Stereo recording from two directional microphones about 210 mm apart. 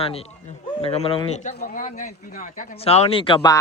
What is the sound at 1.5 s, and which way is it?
Speech, 40° left (ahead or behind).